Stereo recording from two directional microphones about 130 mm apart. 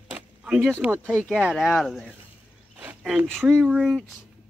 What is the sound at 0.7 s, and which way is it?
Speech, 15° right (ahead or behind).